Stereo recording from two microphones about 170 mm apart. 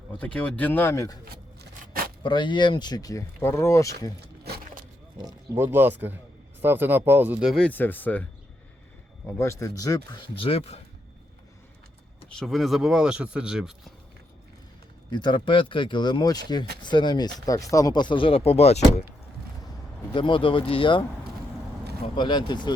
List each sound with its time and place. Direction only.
0.1 s speech: 5° left (ahead or behind)
1.2 s a sound: 65° right (ahead or behind)
2.2 s speech: 25° left (ahead or behind)
4.4 s a sound: 65° right (ahead or behind)
5.5 s speech: 15° right (ahead or behind); by 8.3 s 10° left (ahead or behind)
9.4 s speech: 15° left (ahead or behind); by 10.8 s 30° left (ahead or behind)
12.3 s speech: centre (ahead or behind)
15.1 s speech: 25° left (ahead or behind)
20.1 s speech: 30° left (ahead or behind)
22.0 s speech: 25° left (ahead or behind)